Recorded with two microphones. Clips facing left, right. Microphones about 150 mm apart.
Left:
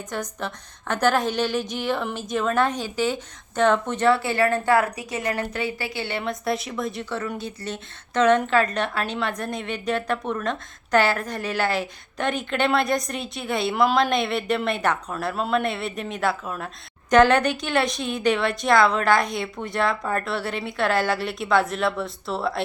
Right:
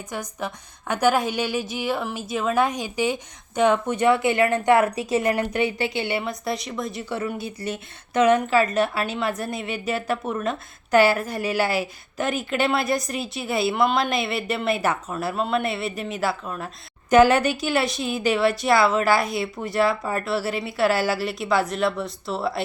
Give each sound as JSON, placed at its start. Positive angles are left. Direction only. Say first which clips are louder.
{"t": 0.1, "sound": "a woman's voice", "louder": "even", "side_deg": -10}
{"t": 6.1, "sound": "a woman's voice", "louder": "left 1 dB", "side_deg": 0}
{"t": 7.0, "sound": "a woman's voice", "louder": "right 1 dB", "side_deg": -10}